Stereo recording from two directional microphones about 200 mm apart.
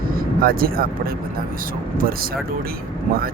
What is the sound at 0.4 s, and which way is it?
Speech, 45° right (ahead or behind).